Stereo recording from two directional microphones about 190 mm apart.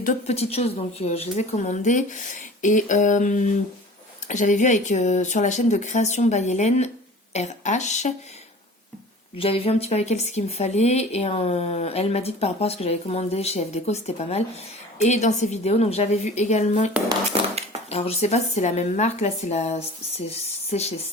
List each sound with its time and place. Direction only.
0.0 s speech: 40° left (ahead or behind)
9.4 s speech: 30° left (ahead or behind)
17.1 s a sound: 30° right (ahead or behind)
17.9 s speech: 35° left (ahead or behind)